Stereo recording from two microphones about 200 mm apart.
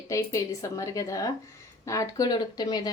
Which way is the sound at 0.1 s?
15° left (ahead or behind).